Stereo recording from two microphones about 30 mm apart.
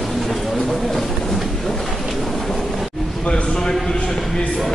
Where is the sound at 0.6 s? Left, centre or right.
Centre.